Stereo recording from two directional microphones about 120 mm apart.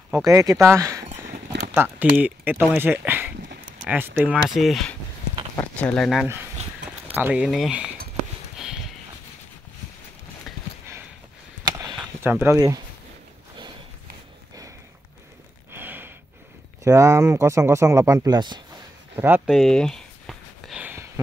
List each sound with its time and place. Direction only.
0.1 s speech: 25° right (ahead or behind)
1.8 s speech: 15° right (ahead or behind)
4.6 s speech: centre (ahead or behind)
7.2 s speech: 10° right (ahead or behind)
8.5 s clip-clop: 5° right (ahead or behind)
12.2 s speech: 15° right (ahead or behind)
12.5 s speech: 30° right (ahead or behind)
15.7 s a sound: 15° right (ahead or behind)
16.8 s speech: 25° right (ahead or behind)
18.2 s speech: 35° right (ahead or behind)
19.1 s speech: 15° right (ahead or behind)
19.4 s a sound: centre (ahead or behind)